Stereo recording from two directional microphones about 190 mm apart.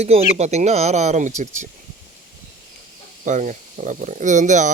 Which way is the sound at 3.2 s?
40° right (ahead or behind).